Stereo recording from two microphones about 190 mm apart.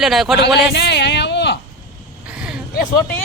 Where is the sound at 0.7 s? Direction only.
60° left (ahead or behind).